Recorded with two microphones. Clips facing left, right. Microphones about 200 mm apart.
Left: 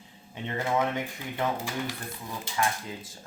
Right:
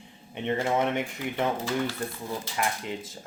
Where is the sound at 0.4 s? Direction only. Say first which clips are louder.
Right 2 dB; 20° right (ahead or behind).